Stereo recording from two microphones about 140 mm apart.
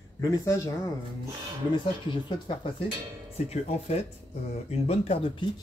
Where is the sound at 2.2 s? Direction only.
35° left (ahead or behind).